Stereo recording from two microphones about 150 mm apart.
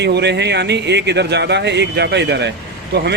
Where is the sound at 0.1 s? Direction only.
90° right.